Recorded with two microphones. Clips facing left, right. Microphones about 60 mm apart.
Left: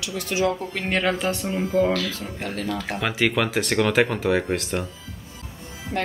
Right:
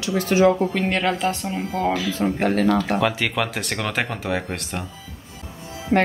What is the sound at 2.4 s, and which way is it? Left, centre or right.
Speech, right.